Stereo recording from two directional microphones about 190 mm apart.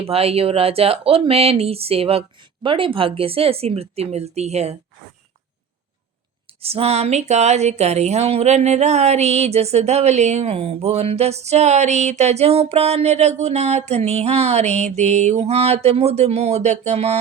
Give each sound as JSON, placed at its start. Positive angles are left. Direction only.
{"t": 0.0, "sound": "speech", "side_deg": -30}
{"t": 6.6, "sound": "speech", "side_deg": -30}